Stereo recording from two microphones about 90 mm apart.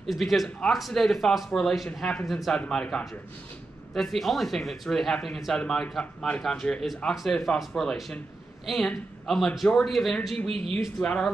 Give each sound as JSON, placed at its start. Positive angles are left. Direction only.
{"t": 0.0, "sound": "a man's voice", "side_deg": 0}
{"t": 10.5, "sound": "speech", "side_deg": -90}
{"t": 11.0, "sound": "a man's voice", "side_deg": 10}